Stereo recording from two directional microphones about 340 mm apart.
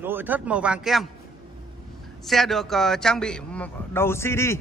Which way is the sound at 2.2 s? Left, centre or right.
Centre.